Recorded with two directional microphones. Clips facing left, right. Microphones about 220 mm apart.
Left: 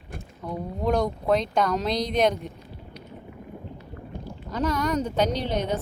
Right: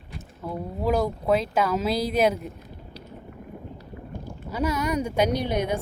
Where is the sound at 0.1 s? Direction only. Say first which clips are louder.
Left 1 dB; 50° left (ahead or behind).